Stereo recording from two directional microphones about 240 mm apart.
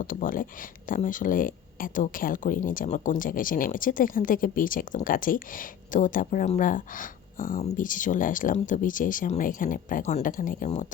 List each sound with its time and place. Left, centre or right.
0.0 s speech: left